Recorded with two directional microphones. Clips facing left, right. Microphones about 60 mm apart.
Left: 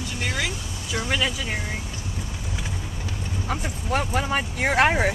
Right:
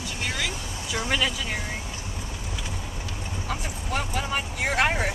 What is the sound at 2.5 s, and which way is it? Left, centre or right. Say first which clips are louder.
Vehicle: left 2 dB; left.